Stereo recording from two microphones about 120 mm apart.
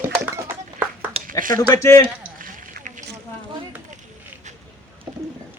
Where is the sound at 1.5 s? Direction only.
30° left (ahead or behind).